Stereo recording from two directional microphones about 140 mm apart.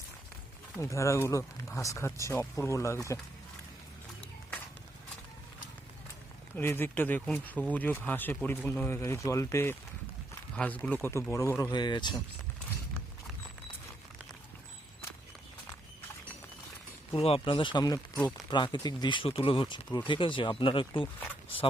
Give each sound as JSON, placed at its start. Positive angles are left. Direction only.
{"t": 0.8, "sound": "speech", "side_deg": 20}
{"t": 6.6, "sound": "speech", "side_deg": 15}
{"t": 17.1, "sound": "speech", "side_deg": 40}